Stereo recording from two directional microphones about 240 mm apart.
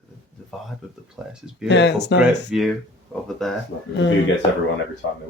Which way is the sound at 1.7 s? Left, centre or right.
Left.